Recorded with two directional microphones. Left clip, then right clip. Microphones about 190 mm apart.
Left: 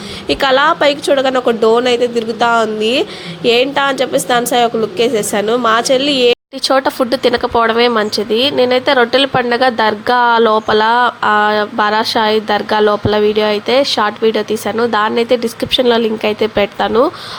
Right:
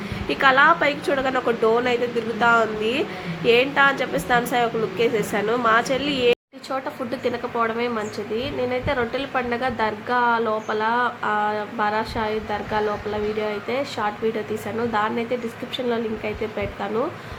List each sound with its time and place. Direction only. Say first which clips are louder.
0.3 s a woman's voice: left 5 dB; 40° left (ahead or behind)